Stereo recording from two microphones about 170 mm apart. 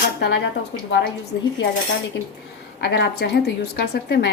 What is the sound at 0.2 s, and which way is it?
Speech, 75° left (ahead or behind).